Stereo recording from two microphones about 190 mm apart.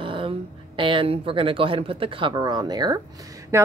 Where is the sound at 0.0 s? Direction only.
25° right (ahead or behind).